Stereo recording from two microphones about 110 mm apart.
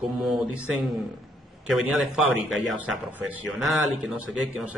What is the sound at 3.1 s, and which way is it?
Speech, 15° right (ahead or behind).